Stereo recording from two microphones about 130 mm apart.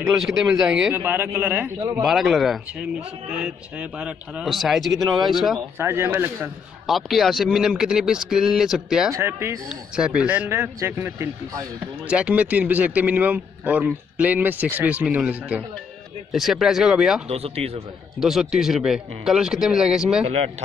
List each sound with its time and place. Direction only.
0.2 s speech: 5° right (ahead or behind)
0.9 s a man's voice: 15° right (ahead or behind)
2.0 s speech: centre (ahead or behind)
4.0 s speech: 5° right (ahead or behind)
5.8 s speech: 20° right (ahead or behind)
6.9 s speech: centre (ahead or behind)
9.1 s speech: 20° right (ahead or behind)
9.7 s a man's voice: 5° right (ahead or behind)
17.3 s speech: 50° right (ahead or behind)
18.2 s speech: 5° right (ahead or behind)